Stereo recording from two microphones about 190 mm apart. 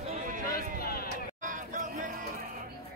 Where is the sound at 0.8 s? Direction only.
50° left (ahead or behind).